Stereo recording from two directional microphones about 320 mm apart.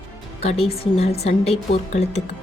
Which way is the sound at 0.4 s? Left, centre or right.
Centre.